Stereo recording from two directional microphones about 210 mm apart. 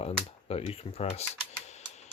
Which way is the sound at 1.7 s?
30° left (ahead or behind).